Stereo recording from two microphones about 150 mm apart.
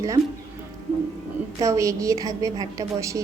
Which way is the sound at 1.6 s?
20° right (ahead or behind).